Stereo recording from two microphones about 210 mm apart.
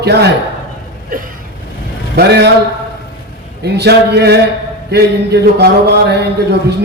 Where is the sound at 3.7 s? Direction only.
55° right (ahead or behind).